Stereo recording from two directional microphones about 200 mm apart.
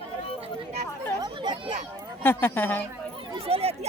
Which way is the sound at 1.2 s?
20° right (ahead or behind).